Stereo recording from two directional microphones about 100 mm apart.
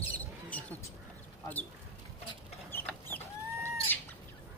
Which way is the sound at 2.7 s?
20° left (ahead or behind).